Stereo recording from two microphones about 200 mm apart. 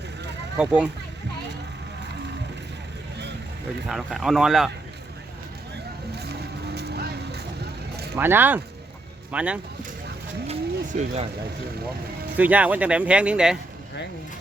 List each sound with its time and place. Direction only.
0.5 s speech: 5° right (ahead or behind)
3.8 s speech: centre (ahead or behind)
6.7 s vehicle: 55° right (ahead or behind)
8.1 s speech: 10° right (ahead or behind)
10.4 s pigeon: 30° right (ahead or behind)
12.4 s speech: 5° right (ahead or behind)